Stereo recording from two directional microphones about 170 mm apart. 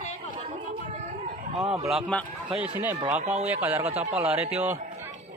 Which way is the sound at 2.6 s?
10° right (ahead or behind).